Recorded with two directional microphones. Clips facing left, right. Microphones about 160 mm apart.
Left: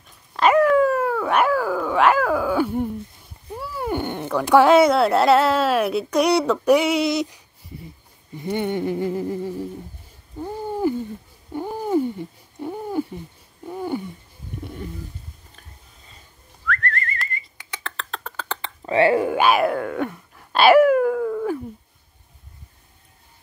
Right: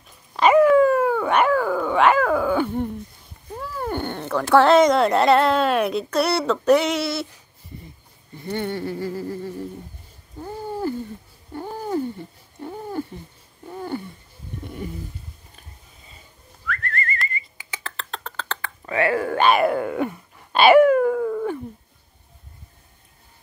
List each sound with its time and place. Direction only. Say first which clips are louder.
0.3 s speech: right 2 dB; centre (ahead or behind); by 7.3 s 15° left (ahead or behind)
8.4 s speech: left 3 dB; 15° left (ahead or behind)
10.4 s a sound: left 4 dB; 15° left (ahead or behind)
16.6 s whistling: left 2 dB; 5° right (ahead or behind)
18.6 s a sound: left 5 dB; 25° left (ahead or behind)
19.2 s wail: even; 5° left (ahead or behind)